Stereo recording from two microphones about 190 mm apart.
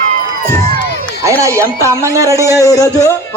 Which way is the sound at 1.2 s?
15° right (ahead or behind).